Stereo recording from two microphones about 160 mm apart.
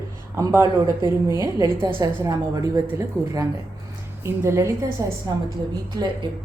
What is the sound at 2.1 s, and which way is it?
Speech, 15° right (ahead or behind).